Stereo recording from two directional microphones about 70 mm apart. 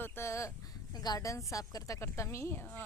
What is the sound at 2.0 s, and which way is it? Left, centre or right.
Speech, left.